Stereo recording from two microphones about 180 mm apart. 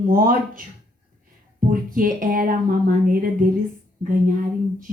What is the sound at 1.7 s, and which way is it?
Speech, 50° right (ahead or behind).